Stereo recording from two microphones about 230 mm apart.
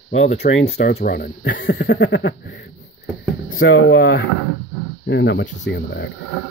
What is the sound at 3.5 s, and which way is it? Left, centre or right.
Speech, left.